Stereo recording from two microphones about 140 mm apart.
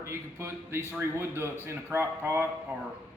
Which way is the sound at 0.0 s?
20° right (ahead or behind).